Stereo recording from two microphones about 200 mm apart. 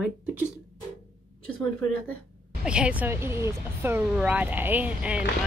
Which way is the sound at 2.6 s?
5° right (ahead or behind).